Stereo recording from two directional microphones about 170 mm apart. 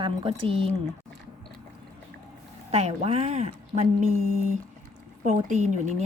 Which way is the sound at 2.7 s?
35° right (ahead or behind).